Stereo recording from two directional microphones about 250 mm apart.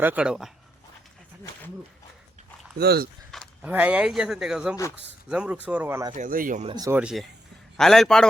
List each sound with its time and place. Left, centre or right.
0.0 s speech: centre
2.7 s speech: right
3.3 s speech: centre
6.1 s speech: right
6.7 s speech: centre